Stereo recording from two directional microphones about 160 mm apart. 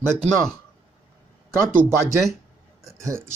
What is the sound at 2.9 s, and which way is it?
Speech, 20° right (ahead or behind).